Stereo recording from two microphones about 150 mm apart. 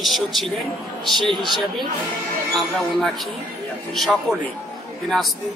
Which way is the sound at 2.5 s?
Centre (ahead or behind).